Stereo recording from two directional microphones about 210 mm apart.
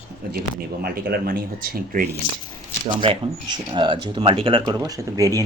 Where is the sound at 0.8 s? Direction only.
50° right (ahead or behind).